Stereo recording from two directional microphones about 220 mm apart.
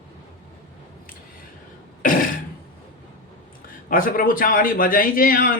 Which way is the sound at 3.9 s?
40° left (ahead or behind).